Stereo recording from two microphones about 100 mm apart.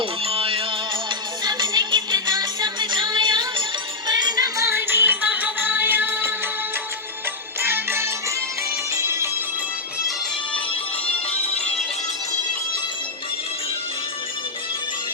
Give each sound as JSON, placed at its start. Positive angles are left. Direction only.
{"t": 0.0, "sound": "music", "side_deg": -65}
{"t": 1.5, "sound": "music", "side_deg": -45}
{"t": 4.6, "sound": "music", "side_deg": -25}
{"t": 7.6, "sound": "music", "side_deg": -20}